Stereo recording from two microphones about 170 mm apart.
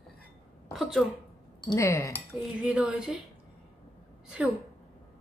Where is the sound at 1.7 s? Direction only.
15° left (ahead or behind).